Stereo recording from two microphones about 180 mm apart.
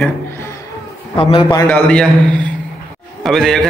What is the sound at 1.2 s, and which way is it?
Speech, 30° left (ahead or behind).